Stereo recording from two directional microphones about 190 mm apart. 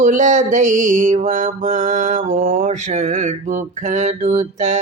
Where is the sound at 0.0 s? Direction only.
40° right (ahead or behind).